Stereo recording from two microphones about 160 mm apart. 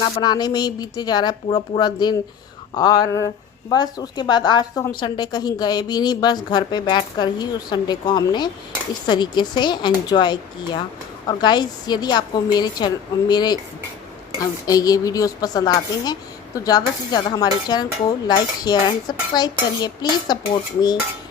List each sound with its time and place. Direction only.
0.0 s a woman's voice: 25° left (ahead or behind)
14.7 s a woman's voice: 25° left (ahead or behind)